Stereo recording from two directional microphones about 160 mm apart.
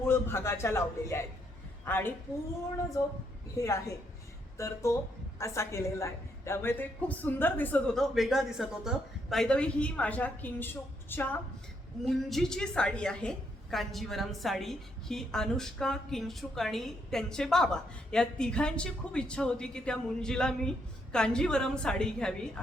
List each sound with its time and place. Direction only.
0.0 s a woman's voice: 15° left (ahead or behind)
3.6 s a woman's voice: 20° left (ahead or behind); by 22.6 s 5° left (ahead or behind)